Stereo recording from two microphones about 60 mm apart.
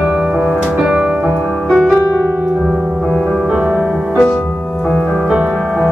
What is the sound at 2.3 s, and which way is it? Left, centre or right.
Piano, right.